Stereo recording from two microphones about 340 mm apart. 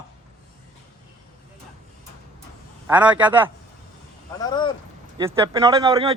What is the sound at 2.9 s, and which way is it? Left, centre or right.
Speech, centre.